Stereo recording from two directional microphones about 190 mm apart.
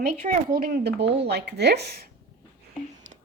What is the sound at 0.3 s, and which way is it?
Speech, 50° right (ahead or behind).